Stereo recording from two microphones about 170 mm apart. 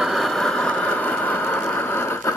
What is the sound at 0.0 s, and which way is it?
Vehicle, centre (ahead or behind).